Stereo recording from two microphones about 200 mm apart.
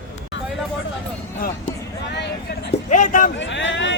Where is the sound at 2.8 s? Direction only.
40° left (ahead or behind).